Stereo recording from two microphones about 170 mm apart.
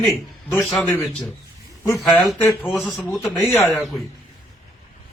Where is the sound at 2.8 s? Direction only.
15° left (ahead or behind).